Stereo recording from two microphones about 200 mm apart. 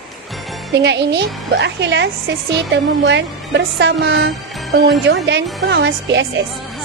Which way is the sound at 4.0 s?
60° right (ahead or behind).